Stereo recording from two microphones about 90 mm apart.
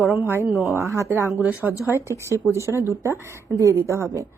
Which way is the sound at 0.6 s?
30° right (ahead or behind).